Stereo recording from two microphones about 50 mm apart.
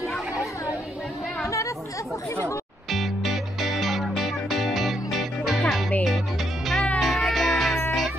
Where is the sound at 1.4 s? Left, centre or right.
Left.